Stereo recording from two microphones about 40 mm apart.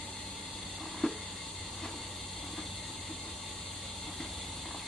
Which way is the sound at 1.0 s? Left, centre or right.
Centre.